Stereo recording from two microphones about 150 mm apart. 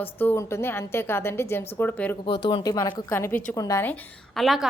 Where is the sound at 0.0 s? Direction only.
15° left (ahead or behind).